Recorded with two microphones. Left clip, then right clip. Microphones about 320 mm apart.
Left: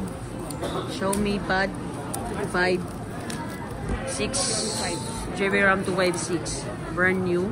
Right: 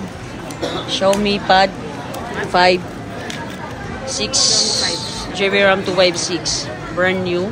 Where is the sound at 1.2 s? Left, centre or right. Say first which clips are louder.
Right 10 dB; right.